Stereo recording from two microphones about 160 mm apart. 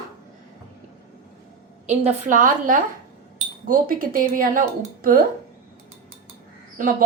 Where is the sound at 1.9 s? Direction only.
45° right (ahead or behind); by 5.3 s 60° right (ahead or behind).